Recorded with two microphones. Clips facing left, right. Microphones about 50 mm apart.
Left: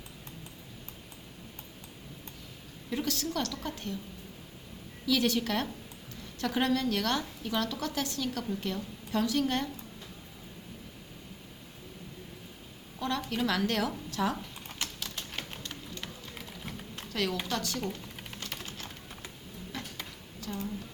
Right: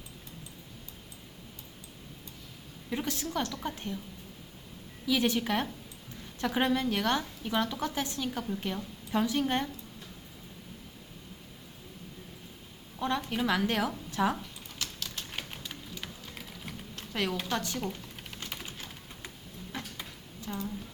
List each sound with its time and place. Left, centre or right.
2.9 s a woman's voice: centre
5.0 s a woman's voice: right
13.0 s a woman's voice: right
14.8 s clip-clop: centre
15.3 s a sound: centre
17.1 s a woman's voice: centre
18.5 s typing: centre
19.7 s a sound: right